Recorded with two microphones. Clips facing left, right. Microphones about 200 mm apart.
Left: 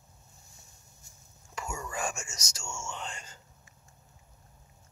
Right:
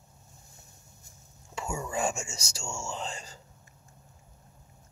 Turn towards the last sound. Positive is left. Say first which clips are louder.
# right 4 dB
turn(degrees=-35)  # may be behind; listen again after turning